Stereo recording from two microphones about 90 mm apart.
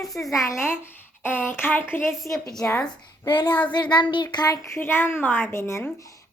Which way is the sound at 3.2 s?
55° left (ahead or behind).